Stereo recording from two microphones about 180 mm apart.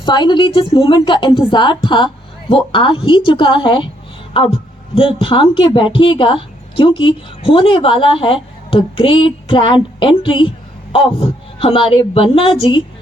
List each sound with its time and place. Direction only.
0.0 s speech: 25° left (ahead or behind)